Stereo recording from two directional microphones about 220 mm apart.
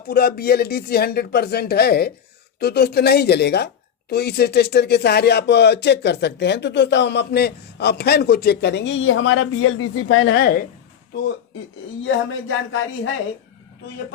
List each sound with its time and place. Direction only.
0.1 s speech: 45° left (ahead or behind)
12.0 s speech: 65° left (ahead or behind)